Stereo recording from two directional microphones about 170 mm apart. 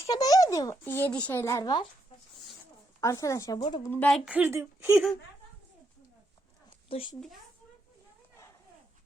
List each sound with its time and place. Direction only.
0.0 s speech: 20° left (ahead or behind)
3.0 s speech: 20° left (ahead or behind)
3.8 s speech: 10° left (ahead or behind)
4.3 s speech: 10° right (ahead or behind)
6.8 s a child's voice: 30° left (ahead or behind)